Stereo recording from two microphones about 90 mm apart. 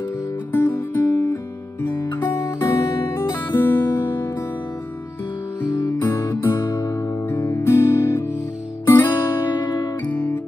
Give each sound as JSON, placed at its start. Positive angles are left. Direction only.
{"t": 0.5, "sound": "music", "side_deg": 25}
{"t": 2.7, "sound": "music", "side_deg": 35}
{"t": 5.7, "sound": "guitar", "side_deg": 55}
{"t": 6.0, "sound": "music", "side_deg": 30}